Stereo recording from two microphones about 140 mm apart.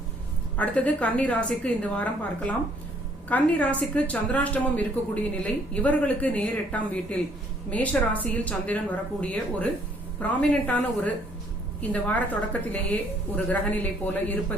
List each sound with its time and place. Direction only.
0.5 s speech: 10° left (ahead or behind)